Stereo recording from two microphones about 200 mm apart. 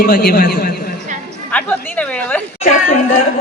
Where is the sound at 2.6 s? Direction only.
35° left (ahead or behind).